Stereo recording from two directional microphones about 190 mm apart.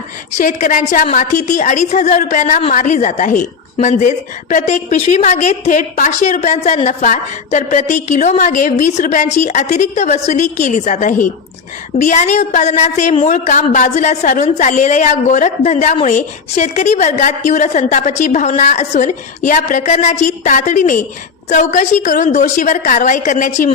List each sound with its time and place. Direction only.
0.3 s a woman's voice: 45° left (ahead or behind)